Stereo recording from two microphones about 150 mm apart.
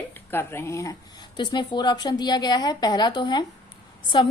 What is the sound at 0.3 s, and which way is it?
A woman's voice, 15° left (ahead or behind).